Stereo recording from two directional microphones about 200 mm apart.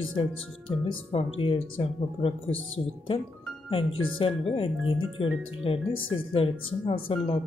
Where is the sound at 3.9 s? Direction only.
85° left.